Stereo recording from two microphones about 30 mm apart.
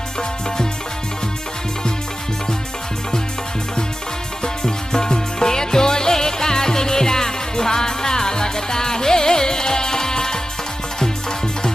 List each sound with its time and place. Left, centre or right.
0.2 s music: left
4.4 s music: left